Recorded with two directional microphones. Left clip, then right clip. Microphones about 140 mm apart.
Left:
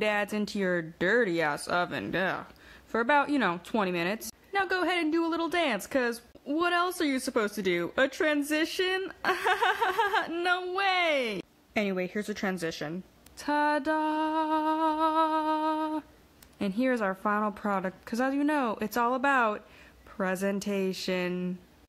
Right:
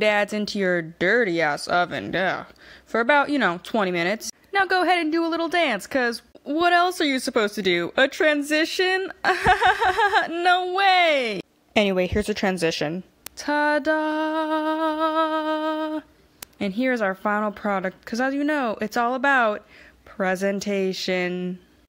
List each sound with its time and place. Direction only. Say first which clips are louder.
0.0 s a woman's voice: right 8 dB; 30° right (ahead or behind)
6.5 s a woman's voice: right 8 dB; 35° right (ahead or behind)
13.4 s a woman's voice: right 6 dB; 30° right (ahead or behind)